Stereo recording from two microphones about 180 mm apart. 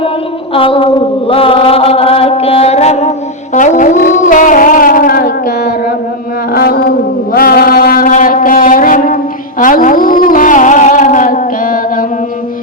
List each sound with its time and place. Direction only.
0.5 s mantra: 30° left (ahead or behind)
3.5 s music: 45° left (ahead or behind); by 6.9 s 60° left (ahead or behind)
7.3 s a sound: 55° left (ahead or behind)
9.6 s music: 50° left (ahead or behind)